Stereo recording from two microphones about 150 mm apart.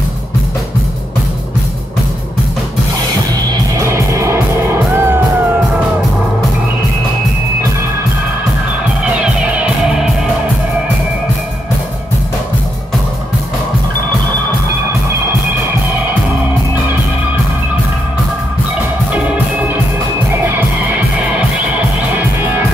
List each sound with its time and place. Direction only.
3.7 s music: 20° right (ahead or behind)
9.2 s music: 10° right (ahead or behind)